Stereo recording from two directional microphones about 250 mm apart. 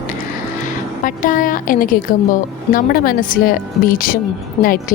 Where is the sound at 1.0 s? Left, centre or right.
Left.